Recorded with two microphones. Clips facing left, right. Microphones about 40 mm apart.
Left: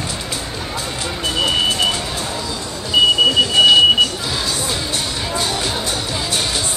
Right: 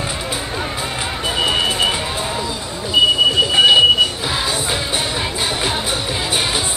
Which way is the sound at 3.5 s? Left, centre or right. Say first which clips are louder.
Even; centre.